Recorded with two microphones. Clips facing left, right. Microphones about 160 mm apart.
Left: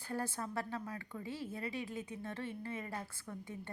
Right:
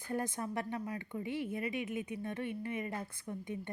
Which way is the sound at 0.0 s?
20° right (ahead or behind).